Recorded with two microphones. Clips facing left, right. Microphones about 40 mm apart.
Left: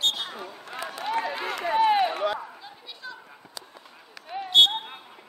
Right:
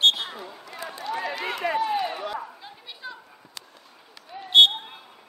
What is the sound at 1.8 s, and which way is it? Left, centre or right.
Run, left.